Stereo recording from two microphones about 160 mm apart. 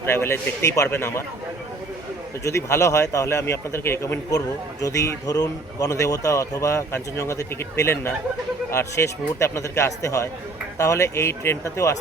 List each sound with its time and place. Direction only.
0.0 s speech: 15° left (ahead or behind)
2.4 s a man's voice: 15° left (ahead or behind)